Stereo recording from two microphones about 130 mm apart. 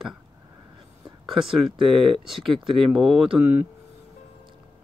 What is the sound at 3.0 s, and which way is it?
Speech, 5° right (ahead or behind).